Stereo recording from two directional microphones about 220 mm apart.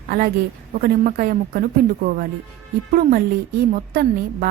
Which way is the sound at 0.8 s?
40° right (ahead or behind).